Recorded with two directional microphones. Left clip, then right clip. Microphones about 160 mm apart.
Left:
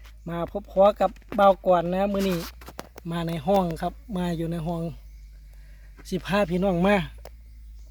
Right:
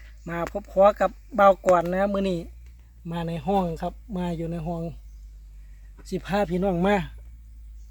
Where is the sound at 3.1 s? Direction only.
30° left (ahead or behind).